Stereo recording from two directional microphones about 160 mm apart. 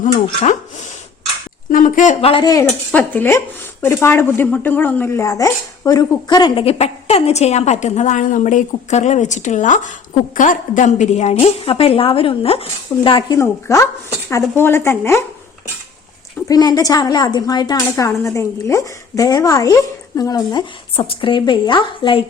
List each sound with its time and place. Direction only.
0.0 s speech: 50° left (ahead or behind)
2.2 s speech: 35° left (ahead or behind)
2.6 s a woman's voice: 10° left (ahead or behind)
16.5 s a woman's voice: 25° left (ahead or behind)